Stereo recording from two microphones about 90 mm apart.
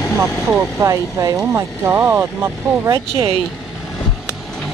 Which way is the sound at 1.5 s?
25° right (ahead or behind).